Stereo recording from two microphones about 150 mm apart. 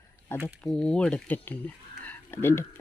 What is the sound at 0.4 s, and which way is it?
Speech, 5° left (ahead or behind).